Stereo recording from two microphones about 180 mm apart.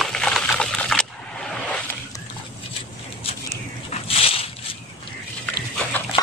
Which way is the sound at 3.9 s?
30° left (ahead or behind).